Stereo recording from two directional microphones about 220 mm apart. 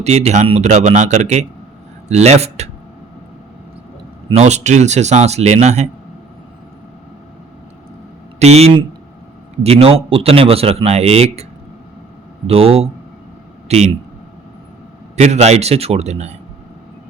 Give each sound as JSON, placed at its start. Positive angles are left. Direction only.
{"t": 0.0, "sound": "a man's voice", "side_deg": -30}
{"t": 4.3, "sound": "a man's voice", "side_deg": -30}
{"t": 8.4, "sound": "a man's voice", "side_deg": -30}
{"t": 12.5, "sound": "a man's voice", "side_deg": -25}
{"t": 15.1, "sound": "a man's voice", "side_deg": -30}